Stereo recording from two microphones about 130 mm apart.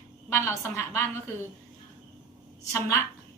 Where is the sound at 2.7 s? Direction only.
20° left (ahead or behind).